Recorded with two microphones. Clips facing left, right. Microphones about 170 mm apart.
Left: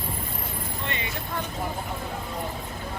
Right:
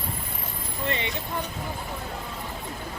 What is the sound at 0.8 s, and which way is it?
Speech, 30° right (ahead or behind).